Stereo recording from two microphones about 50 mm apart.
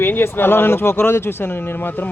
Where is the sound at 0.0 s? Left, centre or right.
Left.